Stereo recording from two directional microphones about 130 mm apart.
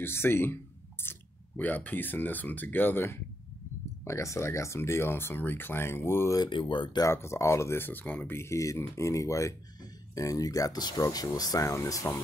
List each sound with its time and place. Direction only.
0.0 s speech: 20° left (ahead or behind)
6.4 s speech: 40° left (ahead or behind)
7.1 s speech: 20° left (ahead or behind)